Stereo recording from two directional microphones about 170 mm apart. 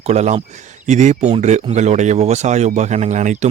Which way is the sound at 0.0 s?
40° right (ahead or behind).